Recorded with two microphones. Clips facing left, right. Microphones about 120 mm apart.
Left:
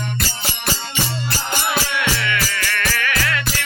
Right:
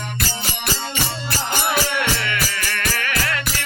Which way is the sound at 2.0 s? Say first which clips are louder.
Left 1 dB; 35° right (ahead or behind).